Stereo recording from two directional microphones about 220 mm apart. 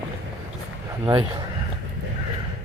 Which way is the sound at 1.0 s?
20° right (ahead or behind).